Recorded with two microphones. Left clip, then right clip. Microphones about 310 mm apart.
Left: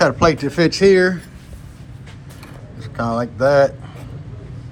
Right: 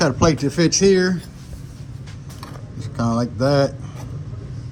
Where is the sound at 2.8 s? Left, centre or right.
Centre.